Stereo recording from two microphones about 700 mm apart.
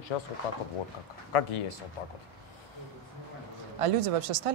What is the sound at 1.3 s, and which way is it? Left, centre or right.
Speech, left.